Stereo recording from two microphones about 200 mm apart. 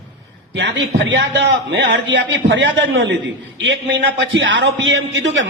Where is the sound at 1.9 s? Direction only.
65° right (ahead or behind).